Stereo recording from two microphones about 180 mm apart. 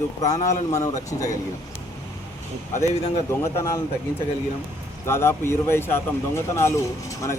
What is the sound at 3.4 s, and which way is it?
Speech, 15° left (ahead or behind).